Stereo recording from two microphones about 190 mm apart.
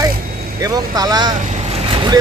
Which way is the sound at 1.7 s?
30° right (ahead or behind).